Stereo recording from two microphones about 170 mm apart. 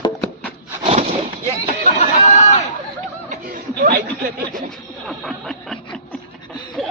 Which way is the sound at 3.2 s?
55° right (ahead or behind).